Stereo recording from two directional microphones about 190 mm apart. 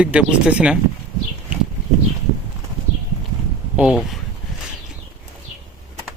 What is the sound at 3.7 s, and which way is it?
Speech, 5° right (ahead or behind).